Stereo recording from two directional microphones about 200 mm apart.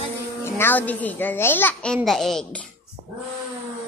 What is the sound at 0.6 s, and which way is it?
A woman's voice, 10° left (ahead or behind).